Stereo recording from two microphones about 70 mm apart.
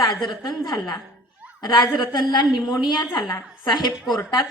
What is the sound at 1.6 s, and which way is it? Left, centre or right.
Speech, left.